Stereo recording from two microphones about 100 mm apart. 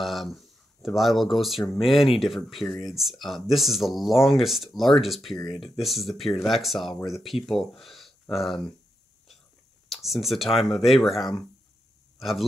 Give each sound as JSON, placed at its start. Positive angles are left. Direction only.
{"t": 0.0, "sound": "speech", "side_deg": 0}
{"t": 5.4, "sound": "speech", "side_deg": 60}
{"t": 5.8, "sound": "speech", "side_deg": 0}
{"t": 9.8, "sound": "speech", "side_deg": 0}